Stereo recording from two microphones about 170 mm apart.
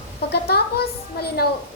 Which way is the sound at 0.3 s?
70° left (ahead or behind).